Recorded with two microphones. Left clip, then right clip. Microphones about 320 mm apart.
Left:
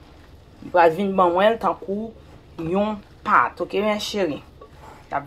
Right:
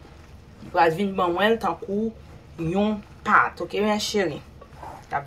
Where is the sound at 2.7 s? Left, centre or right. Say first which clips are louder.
Left 3 dB; centre.